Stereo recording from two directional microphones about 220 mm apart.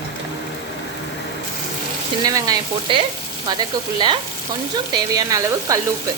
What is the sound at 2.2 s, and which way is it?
A woman's voice, 15° right (ahead or behind).